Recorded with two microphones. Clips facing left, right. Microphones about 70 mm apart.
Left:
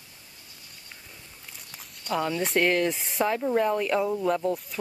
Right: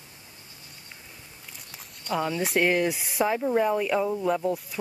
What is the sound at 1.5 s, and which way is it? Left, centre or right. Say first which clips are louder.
Speech: even; centre.